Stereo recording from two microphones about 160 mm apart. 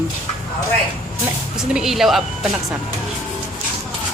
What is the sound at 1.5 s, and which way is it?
A woman's voice, 5° right (ahead or behind).